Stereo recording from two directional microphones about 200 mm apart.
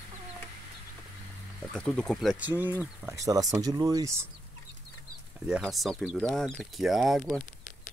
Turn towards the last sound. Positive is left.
turn(degrees=0)  # may be behind; listen again after turning